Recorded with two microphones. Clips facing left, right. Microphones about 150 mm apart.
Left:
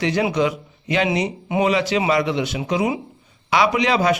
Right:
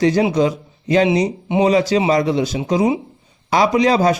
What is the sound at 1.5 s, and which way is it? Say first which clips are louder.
Speech: right 3 dB; 25° right (ahead or behind).